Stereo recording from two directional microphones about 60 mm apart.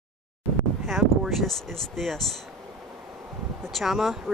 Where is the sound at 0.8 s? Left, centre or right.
Centre.